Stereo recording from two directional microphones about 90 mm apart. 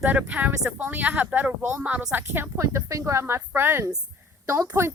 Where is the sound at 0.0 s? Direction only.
15° right (ahead or behind).